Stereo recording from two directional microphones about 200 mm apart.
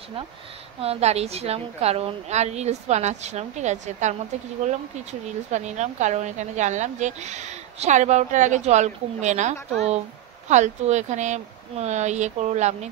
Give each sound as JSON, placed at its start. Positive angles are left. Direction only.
{"t": 0.7, "sound": "speech", "side_deg": -30}
{"t": 5.5, "sound": "speech", "side_deg": -35}